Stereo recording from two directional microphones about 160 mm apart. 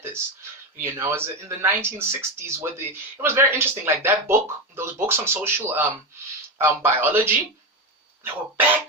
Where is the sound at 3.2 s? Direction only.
15° right (ahead or behind).